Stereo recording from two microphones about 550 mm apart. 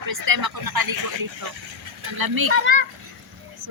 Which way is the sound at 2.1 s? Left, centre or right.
Right.